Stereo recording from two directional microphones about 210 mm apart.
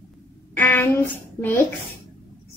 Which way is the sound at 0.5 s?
10° left (ahead or behind).